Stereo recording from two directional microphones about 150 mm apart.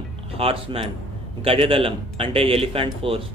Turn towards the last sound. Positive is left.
turn(degrees=-35)  # may be behind; listen again after turning